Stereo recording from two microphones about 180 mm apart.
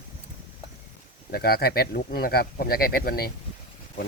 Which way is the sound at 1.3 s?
60° left (ahead or behind).